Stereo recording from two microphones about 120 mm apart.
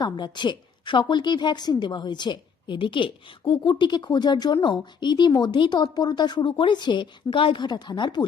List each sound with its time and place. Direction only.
0.0 s a woman's voice: 40° left (ahead or behind)